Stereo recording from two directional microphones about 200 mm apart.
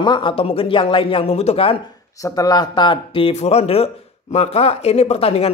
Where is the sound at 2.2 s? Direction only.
20° left (ahead or behind).